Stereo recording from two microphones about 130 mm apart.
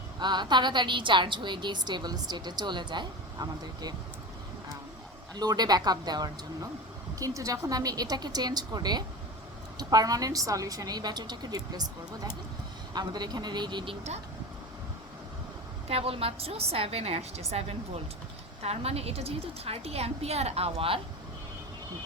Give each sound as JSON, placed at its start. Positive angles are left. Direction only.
{"t": 0.2, "sound": "a woman's voice", "side_deg": -35}
{"t": 5.3, "sound": "a woman's voice", "side_deg": -30}
{"t": 15.9, "sound": "a woman's voice", "side_deg": -50}